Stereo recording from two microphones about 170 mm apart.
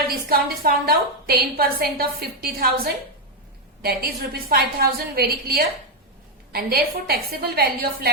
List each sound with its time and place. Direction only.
0.1 s a woman's voice: 60° right (ahead or behind)